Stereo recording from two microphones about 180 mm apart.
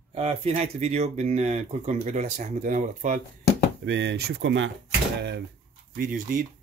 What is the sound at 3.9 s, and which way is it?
Speech, 70° right (ahead or behind).